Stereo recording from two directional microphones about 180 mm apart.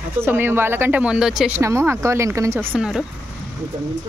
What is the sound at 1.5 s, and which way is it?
Speech, 15° right (ahead or behind).